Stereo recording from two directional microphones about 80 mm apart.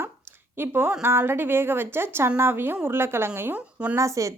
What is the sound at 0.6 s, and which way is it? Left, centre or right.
A woman's voice, right.